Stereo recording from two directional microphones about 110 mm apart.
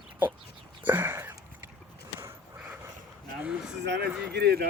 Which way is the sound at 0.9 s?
15° right (ahead or behind).